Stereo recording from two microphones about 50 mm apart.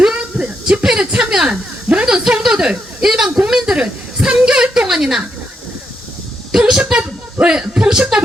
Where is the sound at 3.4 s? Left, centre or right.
Centre.